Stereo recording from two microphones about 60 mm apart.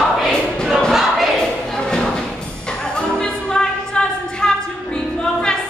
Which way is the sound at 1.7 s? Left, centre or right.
Centre.